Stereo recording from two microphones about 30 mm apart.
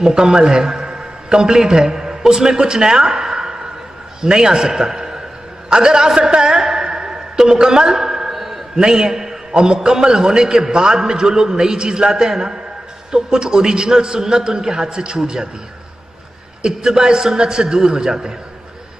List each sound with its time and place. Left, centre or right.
0.0 s a man's voice: right
0.7 s a sound: centre
1.7 s a man's voice: right
4.9 s a sound: right
5.7 s a man's voice: right
6.6 s a sound: centre
8.7 s a man's voice: right
9.5 s a man's voice: right
16.6 s a man's voice: right